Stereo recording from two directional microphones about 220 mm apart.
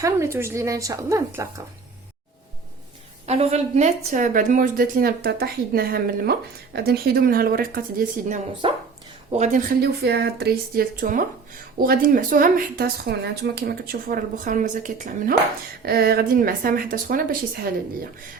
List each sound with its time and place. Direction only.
0.3 s a woman's voice: 10° right (ahead or behind)
3.2 s speech: 30° right (ahead or behind)
8.6 s speech: 20° right (ahead or behind)
9.3 s speech: 35° right (ahead or behind)